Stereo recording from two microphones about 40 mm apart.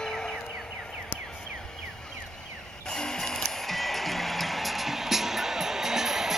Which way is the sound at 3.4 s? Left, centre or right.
Centre.